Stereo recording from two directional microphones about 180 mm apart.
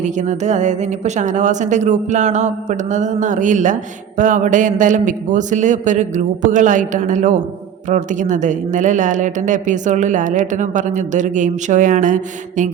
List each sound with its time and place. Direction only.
0.0 s a woman's voice: 40° right (ahead or behind)